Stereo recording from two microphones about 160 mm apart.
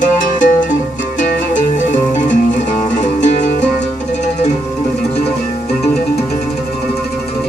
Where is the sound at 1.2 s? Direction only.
55° left (ahead or behind).